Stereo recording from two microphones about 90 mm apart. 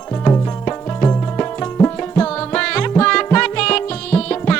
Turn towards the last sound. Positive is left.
turn(degrees=10)  # may be behind; listen again after turning